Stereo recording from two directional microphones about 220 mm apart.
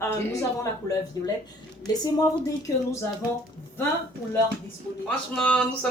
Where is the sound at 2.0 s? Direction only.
15° left (ahead or behind).